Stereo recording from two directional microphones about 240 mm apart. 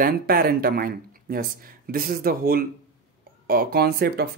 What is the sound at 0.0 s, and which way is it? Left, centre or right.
Speech, right.